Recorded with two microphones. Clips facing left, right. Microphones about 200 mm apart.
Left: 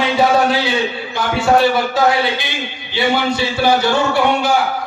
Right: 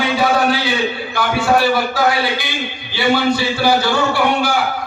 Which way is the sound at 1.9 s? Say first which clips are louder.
Left 2 dB; 20° left (ahead or behind).